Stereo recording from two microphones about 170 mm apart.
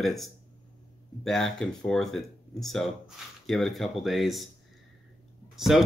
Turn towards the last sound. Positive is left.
turn(degrees=0)  # may be behind; listen again after turning